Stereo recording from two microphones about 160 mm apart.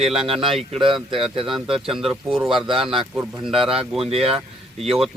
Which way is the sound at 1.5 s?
Centre (ahead or behind).